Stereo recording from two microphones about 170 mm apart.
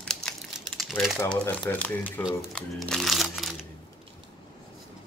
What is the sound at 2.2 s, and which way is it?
A man's voice, 5° right (ahead or behind).